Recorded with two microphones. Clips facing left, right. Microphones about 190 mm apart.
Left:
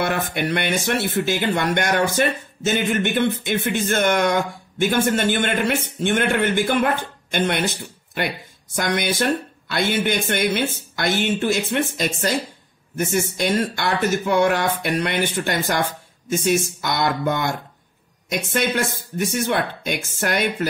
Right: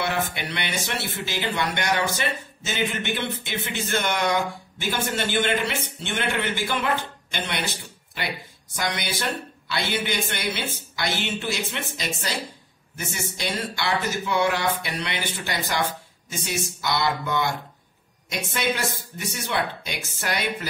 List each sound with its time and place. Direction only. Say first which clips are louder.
0.0 s speech: left 5 dB; 50° left (ahead or behind)